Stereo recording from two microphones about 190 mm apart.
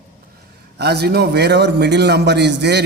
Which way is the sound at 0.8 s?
60° right (ahead or behind).